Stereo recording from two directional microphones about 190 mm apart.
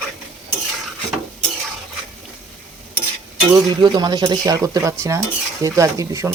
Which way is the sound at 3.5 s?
20° right (ahead or behind).